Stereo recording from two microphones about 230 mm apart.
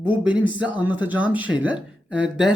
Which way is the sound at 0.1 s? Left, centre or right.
Centre.